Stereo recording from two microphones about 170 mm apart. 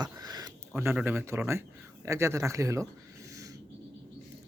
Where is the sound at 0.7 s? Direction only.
10° right (ahead or behind).